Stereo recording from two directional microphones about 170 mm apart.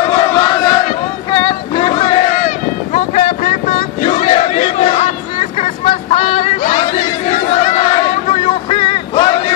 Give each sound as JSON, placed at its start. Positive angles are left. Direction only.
{"t": 0.1, "sound": "battle cry", "side_deg": 25}
{"t": 1.3, "sound": "a sound", "side_deg": 25}
{"t": 2.9, "sound": "crowd", "side_deg": 40}